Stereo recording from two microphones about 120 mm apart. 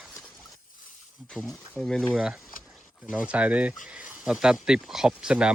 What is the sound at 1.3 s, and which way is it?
Speech, 5° left (ahead or behind).